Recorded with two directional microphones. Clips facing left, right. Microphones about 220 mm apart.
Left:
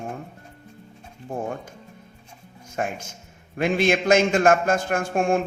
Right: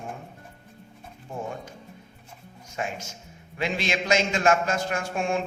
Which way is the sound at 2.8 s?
50° left (ahead or behind).